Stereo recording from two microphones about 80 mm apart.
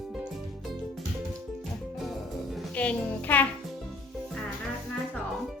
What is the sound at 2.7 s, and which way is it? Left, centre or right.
Speech, centre.